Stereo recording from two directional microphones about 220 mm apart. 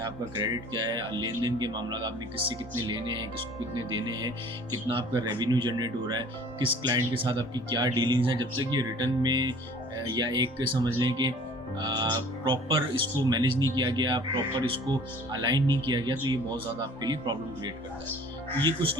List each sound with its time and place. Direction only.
0.0 s speech: 20° right (ahead or behind)